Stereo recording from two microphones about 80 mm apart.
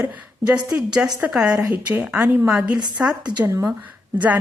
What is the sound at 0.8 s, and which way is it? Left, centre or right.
Speech, centre.